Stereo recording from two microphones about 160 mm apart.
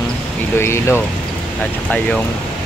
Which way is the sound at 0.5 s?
15° left (ahead or behind).